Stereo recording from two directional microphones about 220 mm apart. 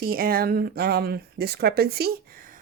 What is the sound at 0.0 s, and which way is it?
Speech, 45° right (ahead or behind).